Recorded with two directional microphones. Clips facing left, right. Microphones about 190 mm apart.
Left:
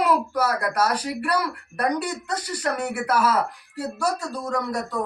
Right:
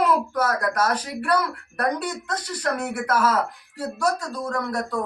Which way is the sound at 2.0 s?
5° left (ahead or behind).